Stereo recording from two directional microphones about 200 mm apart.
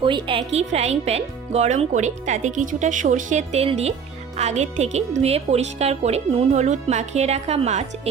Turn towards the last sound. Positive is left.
turn(degrees=-35)  # may be behind; listen again after turning